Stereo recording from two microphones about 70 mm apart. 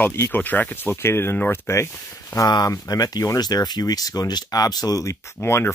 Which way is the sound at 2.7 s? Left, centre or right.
Left.